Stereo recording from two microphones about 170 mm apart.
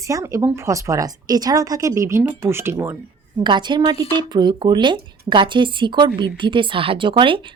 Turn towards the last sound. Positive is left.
turn(degrees=-30)  # may be behind; listen again after turning